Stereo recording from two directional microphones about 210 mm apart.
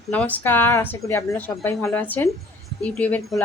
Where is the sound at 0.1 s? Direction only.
5° left (ahead or behind).